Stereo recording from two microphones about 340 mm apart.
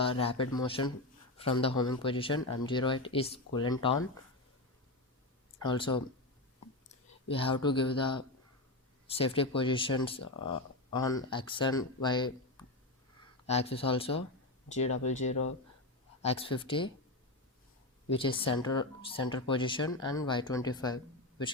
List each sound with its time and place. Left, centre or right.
0.0 s speech: centre
5.6 s speech: centre
10.2 s speech: left
10.9 s speech: centre
15.2 s speech: left
16.2 s speech: centre
18.1 s speech: centre